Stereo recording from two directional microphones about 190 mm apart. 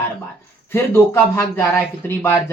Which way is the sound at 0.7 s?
10° left (ahead or behind).